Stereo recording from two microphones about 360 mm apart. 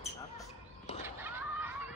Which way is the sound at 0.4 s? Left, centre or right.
Centre.